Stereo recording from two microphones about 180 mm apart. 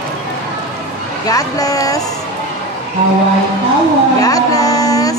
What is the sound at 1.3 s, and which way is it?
Speech, 20° left (ahead or behind).